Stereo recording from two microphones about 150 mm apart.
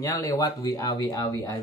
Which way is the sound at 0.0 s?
20° left (ahead or behind).